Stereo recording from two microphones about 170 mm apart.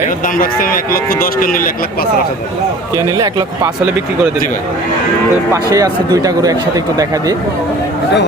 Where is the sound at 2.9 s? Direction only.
20° right (ahead or behind).